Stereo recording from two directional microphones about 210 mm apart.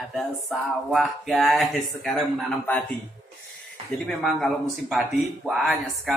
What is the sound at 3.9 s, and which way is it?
Speech, centre (ahead or behind).